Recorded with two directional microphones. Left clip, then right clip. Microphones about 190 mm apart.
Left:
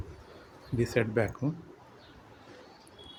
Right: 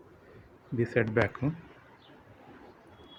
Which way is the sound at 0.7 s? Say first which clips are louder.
Right 1 dB; 10° left (ahead or behind).